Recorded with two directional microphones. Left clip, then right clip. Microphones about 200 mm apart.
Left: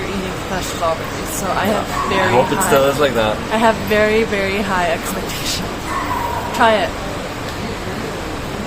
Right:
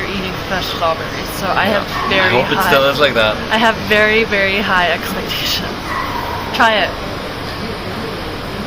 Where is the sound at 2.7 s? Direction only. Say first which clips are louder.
Right 1 dB; 20° left (ahead or behind).